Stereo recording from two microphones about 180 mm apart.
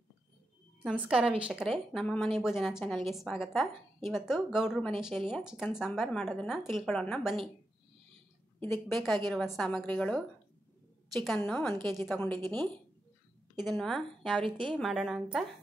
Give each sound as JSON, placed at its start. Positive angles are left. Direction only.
{"t": 0.8, "sound": "a woman's voice", "side_deg": -5}
{"t": 8.7, "sound": "a woman's voice", "side_deg": 0}
{"t": 13.7, "sound": "a woman's voice", "side_deg": 5}
{"t": 14.4, "sound": "a woman's voice", "side_deg": -25}
{"t": 14.8, "sound": "a woman's voice", "side_deg": 0}